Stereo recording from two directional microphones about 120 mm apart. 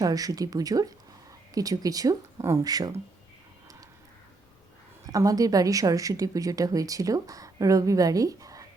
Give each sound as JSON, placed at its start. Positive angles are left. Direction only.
{"t": 0.0, "sound": "speech", "side_deg": -30}
{"t": 5.0, "sound": "a woman's voice", "side_deg": -30}